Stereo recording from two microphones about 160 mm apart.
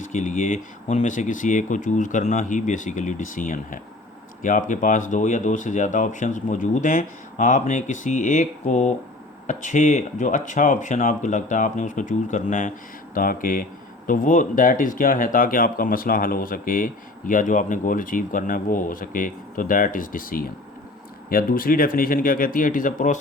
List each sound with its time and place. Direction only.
0.1 s speech: 50° left (ahead or behind)